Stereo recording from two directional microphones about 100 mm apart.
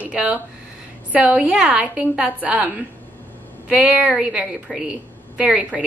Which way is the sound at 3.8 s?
10° right (ahead or behind).